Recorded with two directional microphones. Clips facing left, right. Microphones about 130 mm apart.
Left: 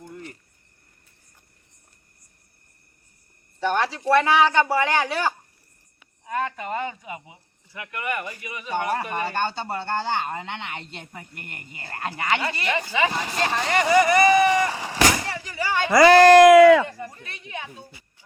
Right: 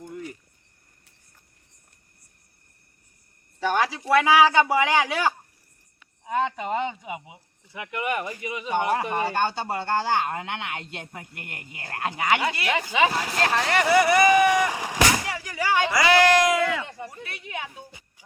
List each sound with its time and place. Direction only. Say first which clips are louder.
0.0 s cricket: right 3 dB; 10° right (ahead or behind)
3.6 s speech: even; 10° right (ahead or behind)
13.1 s speech: right 1 dB; 5° right (ahead or behind)
15.9 s speech: left 9 dB; 45° left (ahead or behind); by 16.7 s 75° left (ahead or behind)
17.0 s speech: even; 10° right (ahead or behind)